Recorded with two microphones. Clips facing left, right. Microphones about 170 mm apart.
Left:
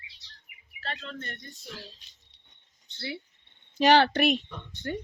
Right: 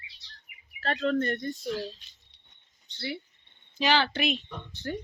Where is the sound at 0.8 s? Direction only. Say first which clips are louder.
Right 12 dB; 50° right (ahead or behind).